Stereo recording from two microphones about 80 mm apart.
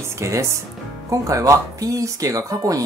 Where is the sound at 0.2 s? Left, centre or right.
Right.